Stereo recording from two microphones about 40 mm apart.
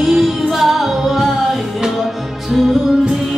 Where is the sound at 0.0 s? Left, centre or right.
Centre.